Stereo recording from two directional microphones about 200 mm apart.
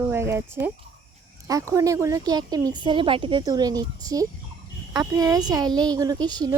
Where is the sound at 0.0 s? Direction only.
15° right (ahead or behind).